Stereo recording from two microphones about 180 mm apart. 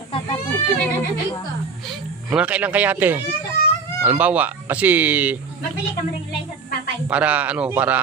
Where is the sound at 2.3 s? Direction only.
5° right (ahead or behind).